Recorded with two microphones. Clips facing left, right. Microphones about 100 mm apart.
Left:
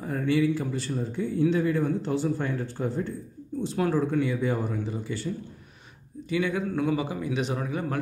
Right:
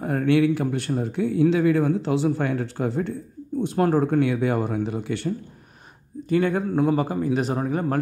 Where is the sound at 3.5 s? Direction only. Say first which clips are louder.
Right 5 dB; 50° right (ahead or behind); by 5.3 s 70° right (ahead or behind).